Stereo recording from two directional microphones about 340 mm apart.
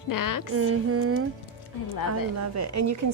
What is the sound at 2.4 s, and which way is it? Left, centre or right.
Speech, right.